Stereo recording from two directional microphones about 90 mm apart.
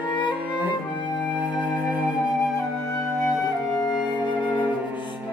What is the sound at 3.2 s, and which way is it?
Music, centre (ahead or behind).